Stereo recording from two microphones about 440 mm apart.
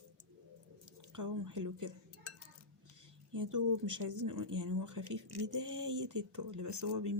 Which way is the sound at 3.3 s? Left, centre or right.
Right.